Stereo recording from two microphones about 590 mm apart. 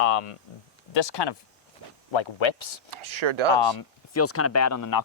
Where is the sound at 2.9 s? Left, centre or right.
Right.